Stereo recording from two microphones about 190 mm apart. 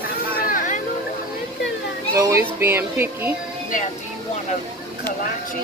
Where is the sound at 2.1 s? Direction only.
15° right (ahead or behind).